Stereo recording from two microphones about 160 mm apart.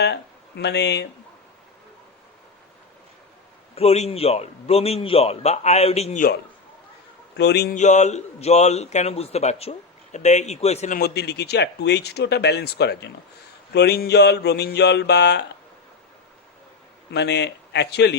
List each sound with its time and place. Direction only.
0.0 s speech: 90° left
3.8 s a man's voice: 40° left (ahead or behind)
7.3 s speech: 90° left
7.8 s a man's voice: 45° left (ahead or behind)
10.9 s speech: 85° left
17.1 s speech: 90° left